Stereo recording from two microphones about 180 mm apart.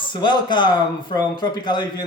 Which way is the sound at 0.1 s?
25° left (ahead or behind).